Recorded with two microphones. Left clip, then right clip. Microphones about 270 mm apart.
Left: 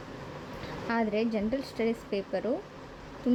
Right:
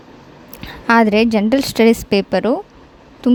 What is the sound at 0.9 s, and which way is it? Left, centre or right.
A woman's voice, right.